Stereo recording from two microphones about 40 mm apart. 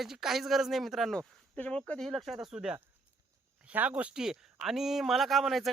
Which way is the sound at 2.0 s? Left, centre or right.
Centre.